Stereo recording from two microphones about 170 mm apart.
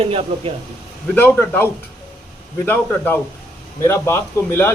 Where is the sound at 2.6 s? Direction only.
10° left (ahead or behind).